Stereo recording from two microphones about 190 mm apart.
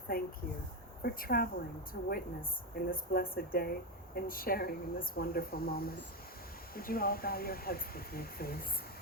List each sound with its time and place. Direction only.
0.1 s speech: 50° left (ahead or behind)